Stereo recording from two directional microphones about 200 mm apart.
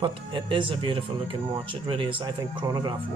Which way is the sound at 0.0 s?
25° right (ahead or behind).